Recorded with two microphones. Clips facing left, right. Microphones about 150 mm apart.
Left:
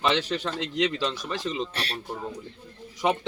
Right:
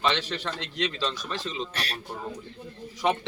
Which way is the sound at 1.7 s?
30° left (ahead or behind).